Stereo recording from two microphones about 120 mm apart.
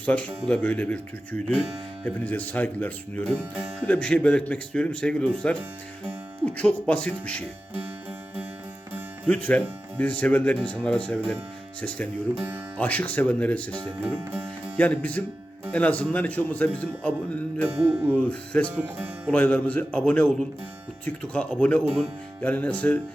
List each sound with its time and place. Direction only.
0.0 s speech: 10° left (ahead or behind)
9.2 s speech: 10° left (ahead or behind)
17.7 s music: 20° right (ahead or behind)
18.1 s speech: 10° left (ahead or behind)
18.8 s speech: 15° right (ahead or behind)
19.3 s speech: 10° left (ahead or behind)